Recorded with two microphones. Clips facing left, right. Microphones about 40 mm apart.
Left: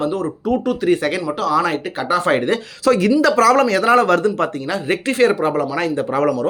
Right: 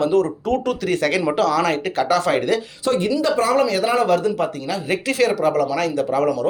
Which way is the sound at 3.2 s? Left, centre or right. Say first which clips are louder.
Left 4 dB; left.